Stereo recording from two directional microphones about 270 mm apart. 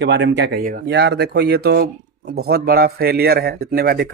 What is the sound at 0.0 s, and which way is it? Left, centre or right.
A man's voice, right.